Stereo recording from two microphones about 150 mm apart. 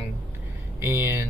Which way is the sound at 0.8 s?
15° right (ahead or behind).